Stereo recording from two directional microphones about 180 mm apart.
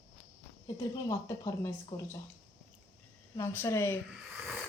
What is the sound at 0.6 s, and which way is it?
A woman's voice, 20° left (ahead or behind).